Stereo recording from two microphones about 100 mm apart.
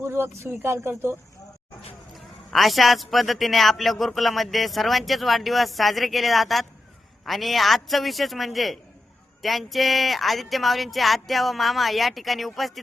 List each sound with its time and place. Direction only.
0.0 s speech: 25° right (ahead or behind)
2.1 s a man's voice: centre (ahead or behind)